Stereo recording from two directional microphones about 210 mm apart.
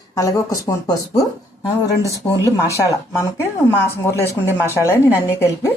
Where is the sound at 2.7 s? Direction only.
15° left (ahead or behind).